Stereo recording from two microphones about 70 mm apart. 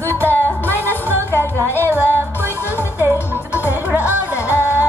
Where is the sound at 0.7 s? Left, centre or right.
Left.